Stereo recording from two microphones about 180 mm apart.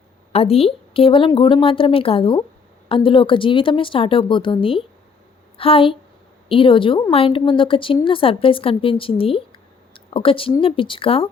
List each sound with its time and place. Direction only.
0.3 s a woman's voice: 35° left (ahead or behind)